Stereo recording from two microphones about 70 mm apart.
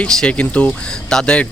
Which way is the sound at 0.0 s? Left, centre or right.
Centre.